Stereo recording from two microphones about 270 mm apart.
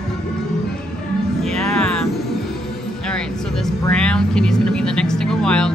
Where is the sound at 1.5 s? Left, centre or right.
Centre.